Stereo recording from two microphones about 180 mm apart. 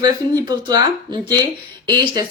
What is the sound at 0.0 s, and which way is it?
Speech, 20° right (ahead or behind).